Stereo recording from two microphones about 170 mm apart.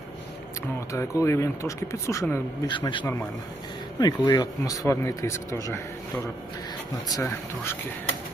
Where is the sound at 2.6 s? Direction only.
25° left (ahead or behind).